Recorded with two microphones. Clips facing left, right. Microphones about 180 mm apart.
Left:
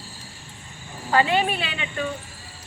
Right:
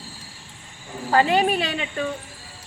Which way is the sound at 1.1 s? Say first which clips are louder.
Right 2 dB; 40° right (ahead or behind).